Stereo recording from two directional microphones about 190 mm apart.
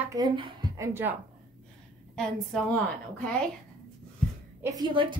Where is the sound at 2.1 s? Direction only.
5° left (ahead or behind).